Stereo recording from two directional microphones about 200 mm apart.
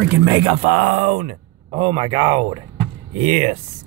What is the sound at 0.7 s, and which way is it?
Speech, 50° right (ahead or behind).